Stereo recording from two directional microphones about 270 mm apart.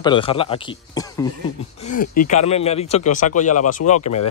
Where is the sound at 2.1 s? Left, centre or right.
Left.